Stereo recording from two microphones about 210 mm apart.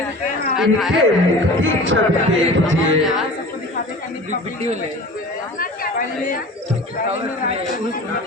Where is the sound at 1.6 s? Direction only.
65° right (ahead or behind).